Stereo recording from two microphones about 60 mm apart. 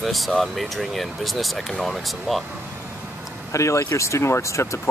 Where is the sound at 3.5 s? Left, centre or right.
Left.